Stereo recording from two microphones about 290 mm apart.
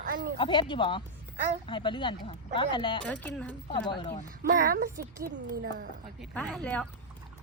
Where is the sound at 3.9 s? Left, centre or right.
Centre.